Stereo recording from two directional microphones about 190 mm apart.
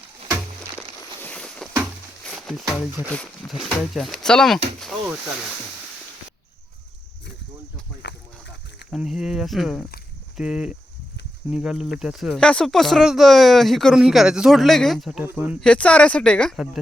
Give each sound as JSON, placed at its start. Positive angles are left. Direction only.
{"t": 1.2, "sound": "a sound", "side_deg": 5}
{"t": 2.2, "sound": "speech", "side_deg": 0}
{"t": 8.9, "sound": "speech", "side_deg": 0}
{"t": 15.6, "sound": "speech", "side_deg": 5}